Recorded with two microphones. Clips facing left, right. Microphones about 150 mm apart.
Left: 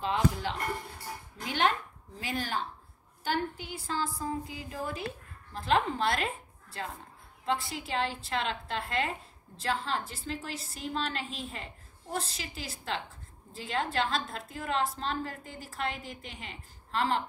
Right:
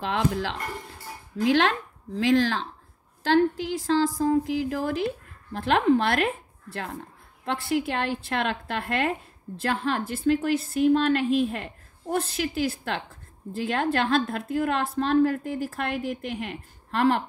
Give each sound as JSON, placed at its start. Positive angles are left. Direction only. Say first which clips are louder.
{"t": 0.0, "sound": "speech", "louder": "right 3 dB", "side_deg": -80}
{"t": 1.4, "sound": "a woman's voice", "louder": "right 8 dB", "side_deg": -90}
{"t": 5.5, "sound": "a woman's voice", "louder": "right 7 dB", "side_deg": -70}